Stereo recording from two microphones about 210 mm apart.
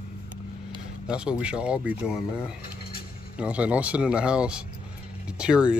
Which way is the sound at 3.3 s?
5° right (ahead or behind).